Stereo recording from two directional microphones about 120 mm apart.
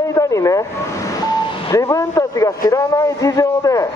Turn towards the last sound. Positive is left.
turn(degrees=30)  # may be behind; listen again after turning